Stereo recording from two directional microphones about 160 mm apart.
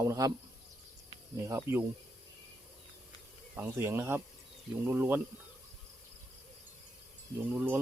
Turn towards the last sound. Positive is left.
turn(degrees=-10)  # may be behind; listen again after turning